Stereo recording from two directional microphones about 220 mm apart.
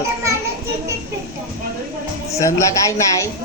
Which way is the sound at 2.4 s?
15° left (ahead or behind).